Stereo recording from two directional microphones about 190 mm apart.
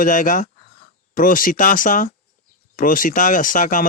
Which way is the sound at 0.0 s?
45° left (ahead or behind).